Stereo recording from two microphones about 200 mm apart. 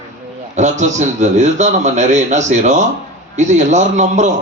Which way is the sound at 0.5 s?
35° right (ahead or behind).